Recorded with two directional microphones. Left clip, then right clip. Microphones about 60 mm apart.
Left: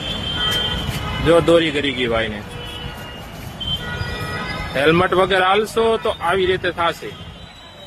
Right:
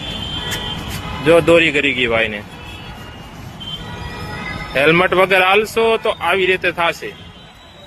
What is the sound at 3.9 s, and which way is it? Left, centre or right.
Speech, centre.